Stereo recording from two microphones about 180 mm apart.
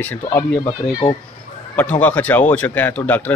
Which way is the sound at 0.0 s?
10° left (ahead or behind).